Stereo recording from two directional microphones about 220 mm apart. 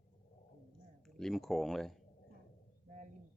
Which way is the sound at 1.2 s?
Centre (ahead or behind).